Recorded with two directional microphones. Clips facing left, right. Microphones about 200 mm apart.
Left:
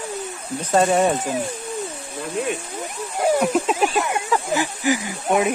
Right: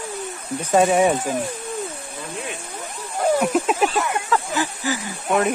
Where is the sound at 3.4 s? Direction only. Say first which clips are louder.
Even; 5° left (ahead or behind).